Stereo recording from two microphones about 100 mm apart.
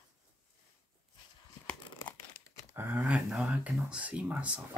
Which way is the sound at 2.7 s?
20° right (ahead or behind).